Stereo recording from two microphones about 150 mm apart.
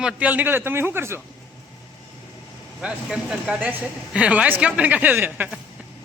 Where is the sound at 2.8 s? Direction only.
5° right (ahead or behind).